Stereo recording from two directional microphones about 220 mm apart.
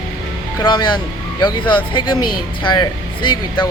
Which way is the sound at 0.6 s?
20° left (ahead or behind).